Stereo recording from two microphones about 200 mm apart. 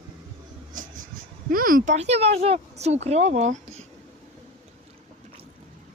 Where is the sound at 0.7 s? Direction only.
40° right (ahead or behind).